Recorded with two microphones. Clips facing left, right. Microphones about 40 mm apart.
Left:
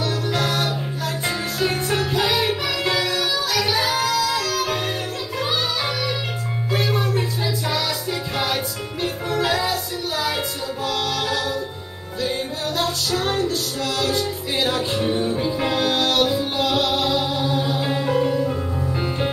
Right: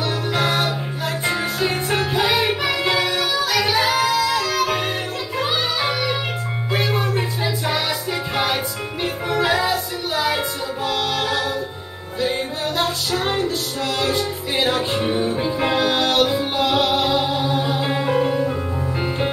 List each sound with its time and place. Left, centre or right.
0.0 s music: right